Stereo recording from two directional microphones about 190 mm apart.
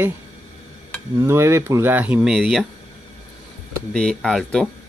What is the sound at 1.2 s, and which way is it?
Speech, 15° right (ahead or behind).